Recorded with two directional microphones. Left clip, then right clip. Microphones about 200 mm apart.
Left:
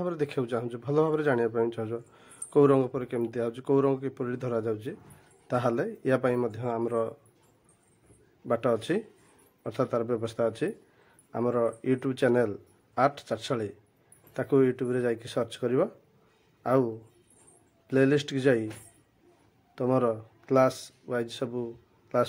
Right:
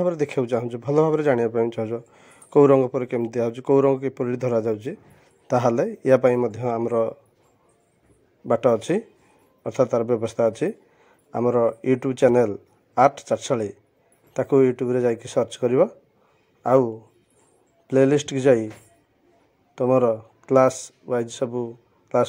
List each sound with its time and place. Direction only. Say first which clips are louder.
0.0 s a man's voice: right 8 dB; 15° right (ahead or behind)
8.5 s a man's voice: right 7 dB; 20° right (ahead or behind)
19.7 s speech: right 7 dB; 15° right (ahead or behind)
21.0 s a sound: right 7 dB; 15° right (ahead or behind)
21.4 s a man's voice: right 7 dB; 15° right (ahead or behind)